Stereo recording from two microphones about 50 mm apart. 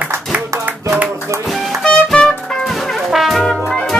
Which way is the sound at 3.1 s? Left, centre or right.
Centre.